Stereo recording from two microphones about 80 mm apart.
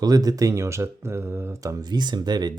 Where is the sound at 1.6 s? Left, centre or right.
Right.